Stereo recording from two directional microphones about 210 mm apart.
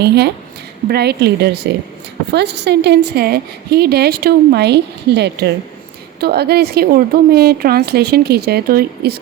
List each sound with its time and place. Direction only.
0.0 s a woman's voice: 50° right (ahead or behind)